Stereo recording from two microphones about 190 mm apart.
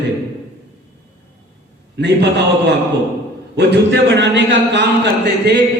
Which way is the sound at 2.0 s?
60° right (ahead or behind).